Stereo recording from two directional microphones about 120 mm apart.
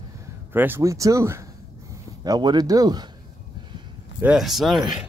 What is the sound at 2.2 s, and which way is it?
Speech, 35° right (ahead or behind).